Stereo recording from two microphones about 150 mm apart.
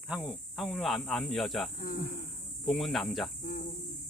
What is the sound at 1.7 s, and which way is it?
Cricket, 75° left (ahead or behind).